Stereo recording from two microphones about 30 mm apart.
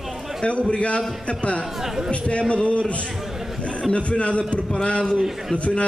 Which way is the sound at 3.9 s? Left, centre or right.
Left.